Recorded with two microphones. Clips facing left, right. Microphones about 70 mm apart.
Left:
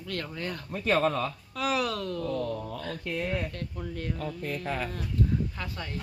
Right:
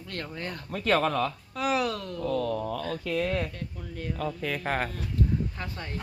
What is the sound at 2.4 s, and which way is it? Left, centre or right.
Speech, right.